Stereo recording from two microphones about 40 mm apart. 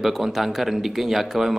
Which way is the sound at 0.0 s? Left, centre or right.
Centre.